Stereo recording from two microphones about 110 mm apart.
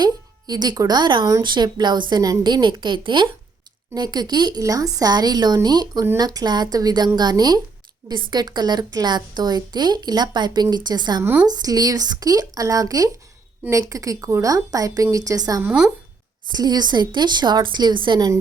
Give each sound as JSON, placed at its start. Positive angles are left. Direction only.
{"t": 0.0, "sound": "a woman's voice", "side_deg": -40}
{"t": 11.2, "sound": "a woman's voice", "side_deg": -15}
{"t": 11.4, "sound": "a woman's voice", "side_deg": -35}
{"t": 15.6, "sound": "a woman's voice", "side_deg": -10}
{"t": 16.5, "sound": "a woman's voice", "side_deg": -40}